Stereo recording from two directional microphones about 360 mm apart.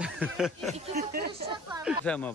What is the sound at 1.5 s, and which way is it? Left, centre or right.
Speech, centre.